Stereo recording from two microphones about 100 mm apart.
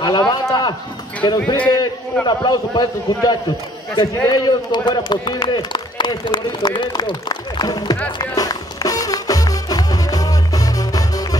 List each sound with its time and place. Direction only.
0.0 s a man's voice: 45° left (ahead or behind)
8.2 s music: 40° left (ahead or behind)